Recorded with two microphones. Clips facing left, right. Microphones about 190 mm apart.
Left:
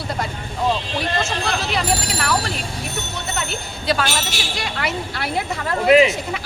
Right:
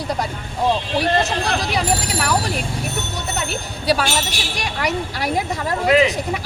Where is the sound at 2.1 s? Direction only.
10° right (ahead or behind).